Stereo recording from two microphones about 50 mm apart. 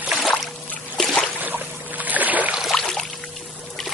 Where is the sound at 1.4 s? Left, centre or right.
Right.